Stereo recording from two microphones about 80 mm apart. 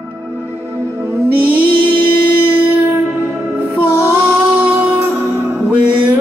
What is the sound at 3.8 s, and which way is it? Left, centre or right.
Music, right.